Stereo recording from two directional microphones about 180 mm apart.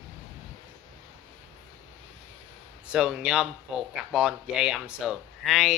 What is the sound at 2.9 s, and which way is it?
Speech, 5° right (ahead or behind).